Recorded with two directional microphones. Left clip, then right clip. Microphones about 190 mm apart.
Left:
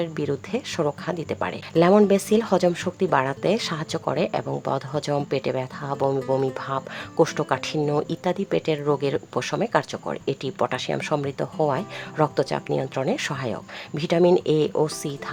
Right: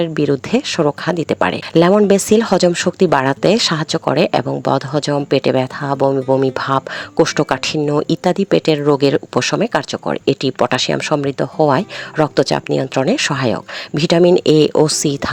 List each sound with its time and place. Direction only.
0.0 s speech: 35° right (ahead or behind)
6.4 s speech: 40° right (ahead or behind)
7.8 s speech: 25° right (ahead or behind)
8.0 s speech: 35° right (ahead or behind)